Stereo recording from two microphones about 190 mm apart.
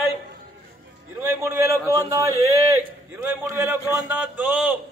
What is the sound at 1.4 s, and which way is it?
A man's voice, 15° right (ahead or behind).